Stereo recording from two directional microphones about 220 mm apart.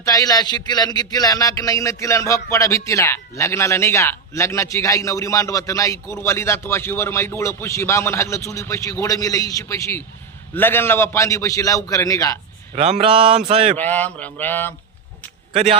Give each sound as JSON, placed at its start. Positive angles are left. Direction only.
{"t": 0.0, "sound": "speech", "side_deg": 15}
{"t": 12.7, "sound": "speech", "side_deg": -30}
{"t": 13.7, "sound": "speech", "side_deg": 5}
{"t": 15.5, "sound": "speech", "side_deg": -30}